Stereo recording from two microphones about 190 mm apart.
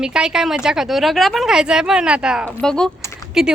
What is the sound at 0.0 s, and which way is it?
Speech, 5° right (ahead or behind).